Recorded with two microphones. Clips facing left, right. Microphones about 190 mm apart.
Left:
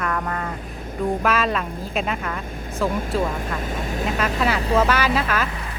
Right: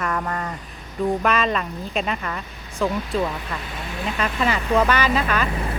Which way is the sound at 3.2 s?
45° left (ahead or behind).